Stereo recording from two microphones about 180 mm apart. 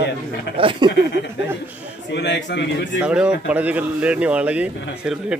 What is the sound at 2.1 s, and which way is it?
Speech, 70° left (ahead or behind).